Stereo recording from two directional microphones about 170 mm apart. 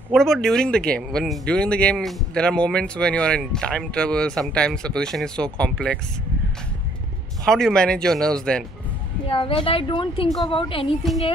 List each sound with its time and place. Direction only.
0.1 s speech: centre (ahead or behind)
7.4 s speech: 5° left (ahead or behind)
9.3 s a woman's voice: 30° left (ahead or behind)
11.0 s speech: centre (ahead or behind)